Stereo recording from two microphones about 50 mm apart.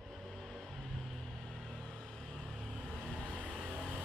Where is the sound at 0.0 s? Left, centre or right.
Centre.